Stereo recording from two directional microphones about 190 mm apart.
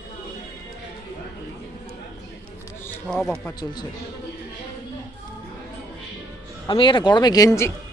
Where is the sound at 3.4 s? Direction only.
20° left (ahead or behind).